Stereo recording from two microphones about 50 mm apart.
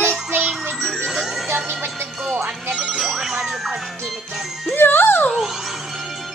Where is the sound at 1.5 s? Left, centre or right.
Right.